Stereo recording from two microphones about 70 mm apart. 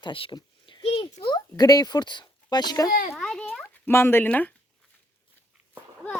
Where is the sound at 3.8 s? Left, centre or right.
Left.